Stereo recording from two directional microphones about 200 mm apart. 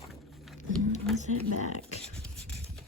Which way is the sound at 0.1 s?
Centre (ahead or behind).